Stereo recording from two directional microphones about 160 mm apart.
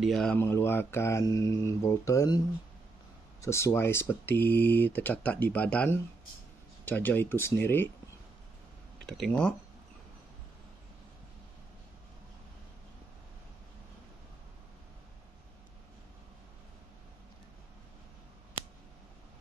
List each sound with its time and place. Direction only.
0.0 s speech: 5° left (ahead or behind)
0.4 s speech: 15° left (ahead or behind)
9.0 s speech: centre (ahead or behind)